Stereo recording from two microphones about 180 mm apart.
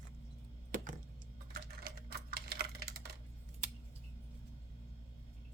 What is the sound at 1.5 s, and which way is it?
Typing, 55° right (ahead or behind).